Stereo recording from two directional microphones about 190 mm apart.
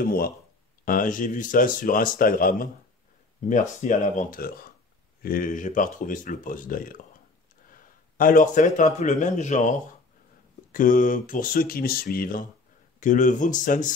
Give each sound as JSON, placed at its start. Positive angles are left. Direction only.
{"t": 0.0, "sound": "a man's voice", "side_deg": 50}